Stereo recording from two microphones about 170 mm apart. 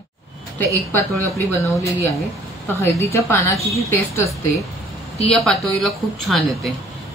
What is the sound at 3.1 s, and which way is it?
A woman's voice, 15° left (ahead or behind).